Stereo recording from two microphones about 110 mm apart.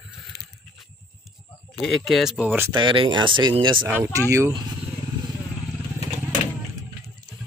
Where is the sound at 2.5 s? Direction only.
20° right (ahead or behind).